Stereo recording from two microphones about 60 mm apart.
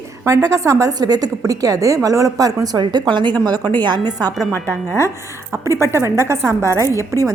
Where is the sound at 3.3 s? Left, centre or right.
Left.